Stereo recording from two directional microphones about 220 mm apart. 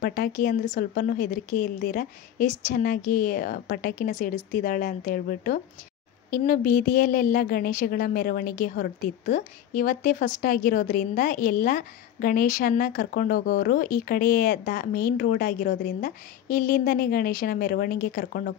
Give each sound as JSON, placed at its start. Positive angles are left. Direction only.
{"t": 0.0, "sound": "a woman's voice", "side_deg": 40}